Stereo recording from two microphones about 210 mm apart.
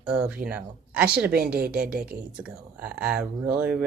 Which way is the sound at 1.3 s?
45° right (ahead or behind).